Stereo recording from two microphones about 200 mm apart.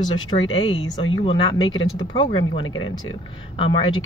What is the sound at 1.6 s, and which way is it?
Speech, 75° left (ahead or behind).